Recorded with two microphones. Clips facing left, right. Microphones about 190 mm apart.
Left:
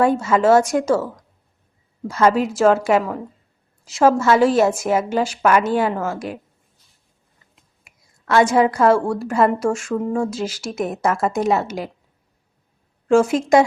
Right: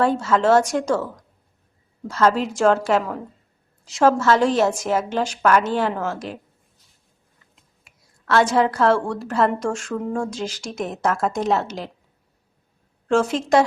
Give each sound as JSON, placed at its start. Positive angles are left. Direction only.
{"t": 0.0, "sound": "a woman's voice", "side_deg": 10}
{"t": 7.5, "sound": "a woman's voice", "side_deg": 10}
{"t": 13.1, "sound": "a woman's voice", "side_deg": 10}